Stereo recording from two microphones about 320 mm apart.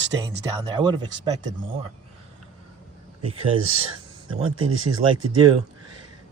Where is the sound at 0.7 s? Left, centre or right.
Centre.